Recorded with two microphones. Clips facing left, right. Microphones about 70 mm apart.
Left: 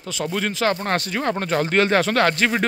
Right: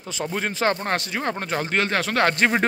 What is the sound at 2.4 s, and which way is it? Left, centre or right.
Speech, right.